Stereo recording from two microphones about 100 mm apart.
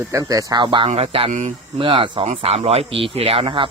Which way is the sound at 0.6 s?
65° right (ahead or behind).